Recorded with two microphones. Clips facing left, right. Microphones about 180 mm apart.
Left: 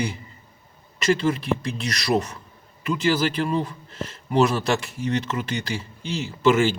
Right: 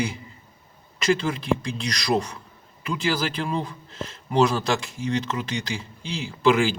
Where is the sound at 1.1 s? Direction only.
5° left (ahead or behind).